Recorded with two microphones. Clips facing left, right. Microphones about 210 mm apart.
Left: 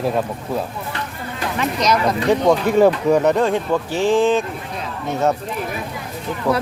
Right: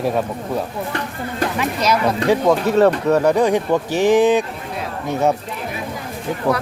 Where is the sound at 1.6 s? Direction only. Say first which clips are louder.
Left 2 dB; 5° right (ahead or behind).